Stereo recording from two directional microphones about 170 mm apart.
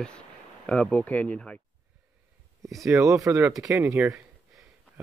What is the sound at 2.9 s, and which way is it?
Speech, 15° right (ahead or behind).